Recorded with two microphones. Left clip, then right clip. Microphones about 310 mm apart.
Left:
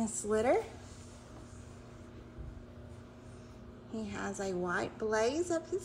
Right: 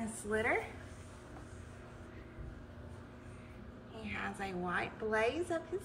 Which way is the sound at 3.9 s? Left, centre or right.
Centre.